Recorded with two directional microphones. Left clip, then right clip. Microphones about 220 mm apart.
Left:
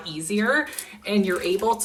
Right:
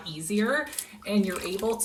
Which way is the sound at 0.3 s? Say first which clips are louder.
Left 5 dB; centre (ahead or behind).